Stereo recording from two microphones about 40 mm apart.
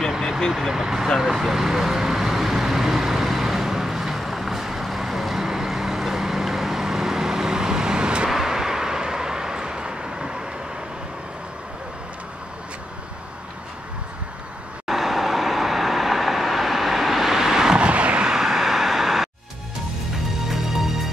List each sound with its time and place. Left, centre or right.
0.5 s speech: centre
1.2 s vehicle: centre
8.3 s vehicle: centre
14.9 s vehicle: centre
17.7 s vehicle: right
18.2 s vehicle: centre
20.4 s music: centre